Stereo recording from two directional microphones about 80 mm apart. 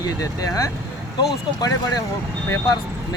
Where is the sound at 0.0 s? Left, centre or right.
Left.